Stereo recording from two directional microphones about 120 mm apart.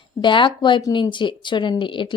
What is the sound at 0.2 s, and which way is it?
Speech, 40° left (ahead or behind).